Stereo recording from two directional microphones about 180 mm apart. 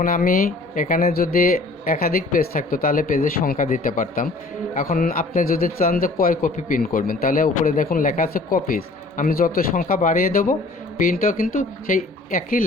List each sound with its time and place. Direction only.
0.0 s speech: 50° left (ahead or behind)